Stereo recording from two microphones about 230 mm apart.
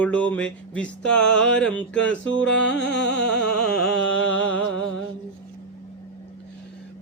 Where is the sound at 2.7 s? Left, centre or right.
Left.